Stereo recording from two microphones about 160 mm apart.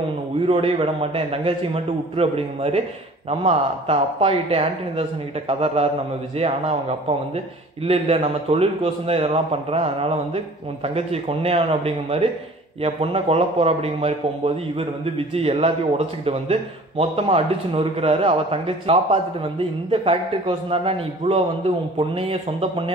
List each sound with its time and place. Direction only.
0.5 s a man's voice: 35° right (ahead or behind)